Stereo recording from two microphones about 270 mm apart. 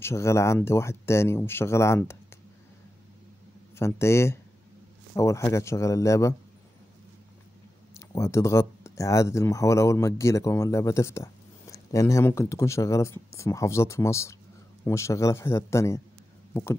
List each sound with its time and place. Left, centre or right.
0.0 s speech: centre
3.7 s speech: centre
8.1 s speech: centre